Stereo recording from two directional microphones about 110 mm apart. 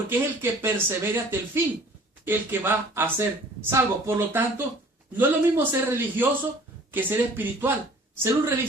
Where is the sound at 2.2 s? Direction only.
20° right (ahead or behind).